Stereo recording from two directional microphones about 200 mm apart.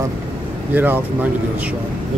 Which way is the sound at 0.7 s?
10° right (ahead or behind).